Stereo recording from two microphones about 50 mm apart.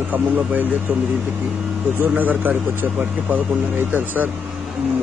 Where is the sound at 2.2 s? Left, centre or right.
Right.